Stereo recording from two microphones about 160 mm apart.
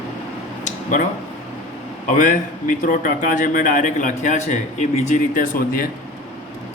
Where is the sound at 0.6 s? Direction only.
55° left (ahead or behind).